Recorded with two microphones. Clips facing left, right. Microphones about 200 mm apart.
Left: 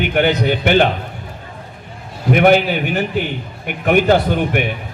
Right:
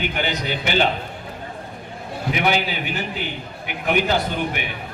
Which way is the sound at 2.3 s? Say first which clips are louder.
Left 10 dB; 50° left (ahead or behind).